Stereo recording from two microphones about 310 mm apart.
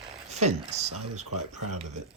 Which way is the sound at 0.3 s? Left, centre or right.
Right.